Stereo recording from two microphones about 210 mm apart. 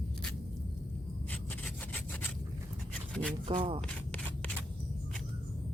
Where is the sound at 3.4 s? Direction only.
25° right (ahead or behind).